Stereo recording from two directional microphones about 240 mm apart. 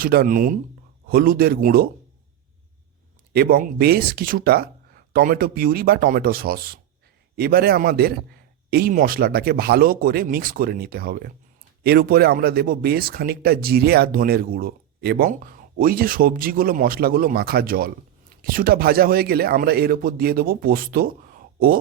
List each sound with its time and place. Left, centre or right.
0.0 s speech: right
3.3 s speech: right